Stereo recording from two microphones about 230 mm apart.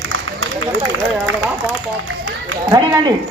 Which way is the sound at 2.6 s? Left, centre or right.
Centre.